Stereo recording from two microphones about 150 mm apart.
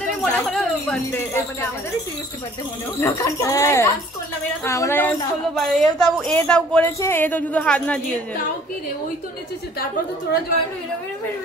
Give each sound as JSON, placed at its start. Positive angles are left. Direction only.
{"t": 0.2, "sound": "a sound", "side_deg": 0}
{"t": 3.0, "sound": "speech", "side_deg": 20}
{"t": 5.5, "sound": "speech", "side_deg": 5}